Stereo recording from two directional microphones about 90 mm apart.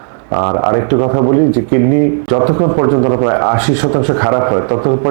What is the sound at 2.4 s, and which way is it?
A man's voice, 30° right (ahead or behind).